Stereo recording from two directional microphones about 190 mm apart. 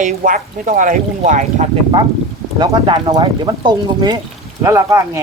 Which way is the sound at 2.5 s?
25° right (ahead or behind).